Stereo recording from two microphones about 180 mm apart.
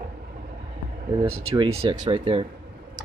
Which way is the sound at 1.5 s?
35° right (ahead or behind).